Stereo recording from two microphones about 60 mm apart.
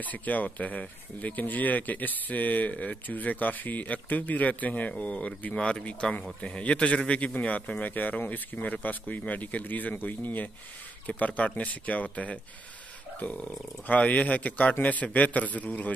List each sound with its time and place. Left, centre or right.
0.0 s speech: left